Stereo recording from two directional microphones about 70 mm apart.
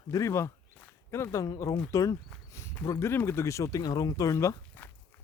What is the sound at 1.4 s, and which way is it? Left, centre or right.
Speech, left.